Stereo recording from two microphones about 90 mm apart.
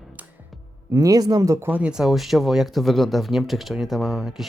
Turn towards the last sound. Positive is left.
turn(degrees=-5)  # may be behind; listen again after turning